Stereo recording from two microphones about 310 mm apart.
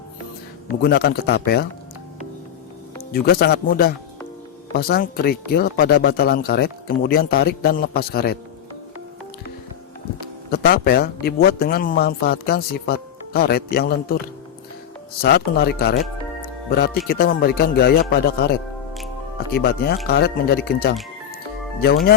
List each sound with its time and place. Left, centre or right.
0.8 s speech: left
3.1 s speech: left
10.5 s speech: left
15.2 s speech: left
17.1 s speech: left